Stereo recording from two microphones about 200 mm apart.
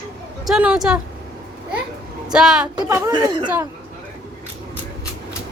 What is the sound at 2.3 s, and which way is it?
Speech, 5° right (ahead or behind).